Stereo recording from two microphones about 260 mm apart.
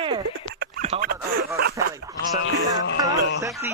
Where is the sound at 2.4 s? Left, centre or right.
Left.